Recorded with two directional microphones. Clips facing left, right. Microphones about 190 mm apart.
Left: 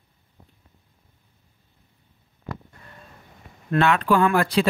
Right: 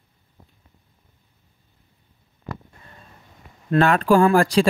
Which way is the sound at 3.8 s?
40° right (ahead or behind).